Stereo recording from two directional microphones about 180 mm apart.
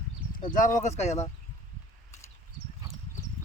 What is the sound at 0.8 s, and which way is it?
Speech, 40° left (ahead or behind).